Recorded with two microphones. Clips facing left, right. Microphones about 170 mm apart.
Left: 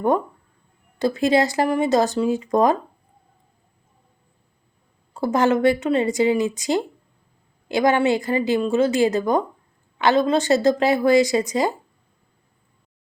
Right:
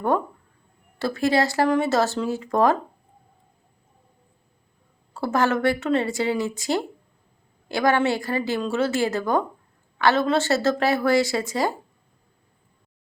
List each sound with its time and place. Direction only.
0.9 s speech: 20° left (ahead or behind)
5.1 s a woman's voice: 20° left (ahead or behind)